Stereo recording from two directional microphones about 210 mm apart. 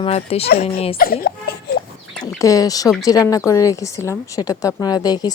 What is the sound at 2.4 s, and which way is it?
Speech, 15° left (ahead or behind).